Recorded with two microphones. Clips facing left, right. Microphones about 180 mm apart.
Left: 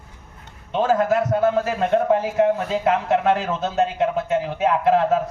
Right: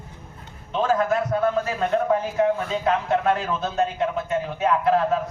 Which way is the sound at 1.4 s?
25° left (ahead or behind).